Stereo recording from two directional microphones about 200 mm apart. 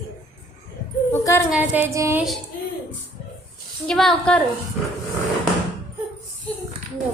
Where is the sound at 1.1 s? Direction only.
15° left (ahead or behind).